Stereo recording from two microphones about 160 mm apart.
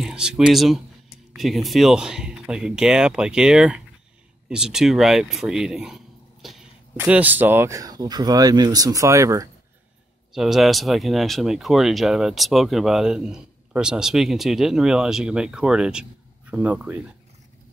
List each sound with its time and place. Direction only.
0.0 s speech: 5° right (ahead or behind)
10.3 s speech: centre (ahead or behind)